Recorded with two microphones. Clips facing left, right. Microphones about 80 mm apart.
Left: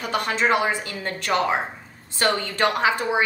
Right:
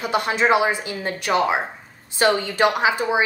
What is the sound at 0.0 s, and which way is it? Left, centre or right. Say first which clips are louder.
A woman's voice: right 3 dB; centre.